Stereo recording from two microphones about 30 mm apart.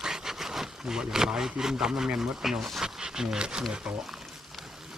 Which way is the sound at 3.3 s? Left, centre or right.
Right.